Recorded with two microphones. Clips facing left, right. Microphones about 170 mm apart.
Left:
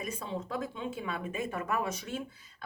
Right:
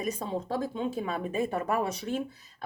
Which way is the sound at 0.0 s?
35° right (ahead or behind).